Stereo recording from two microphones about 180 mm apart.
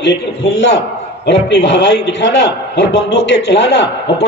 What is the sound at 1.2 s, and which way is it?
A man's voice, 85° left.